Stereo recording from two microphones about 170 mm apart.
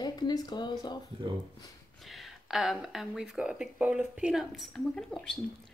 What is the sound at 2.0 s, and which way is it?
Speech, centre (ahead or behind).